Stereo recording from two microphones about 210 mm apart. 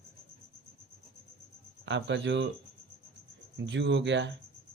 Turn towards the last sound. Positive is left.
turn(degrees=-60)  # may be behind; listen again after turning